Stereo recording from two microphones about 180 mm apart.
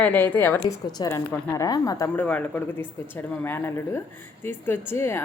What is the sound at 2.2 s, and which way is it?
Speech, 5° left (ahead or behind).